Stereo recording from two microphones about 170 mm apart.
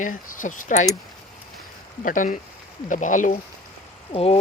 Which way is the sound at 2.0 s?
50° left (ahead or behind).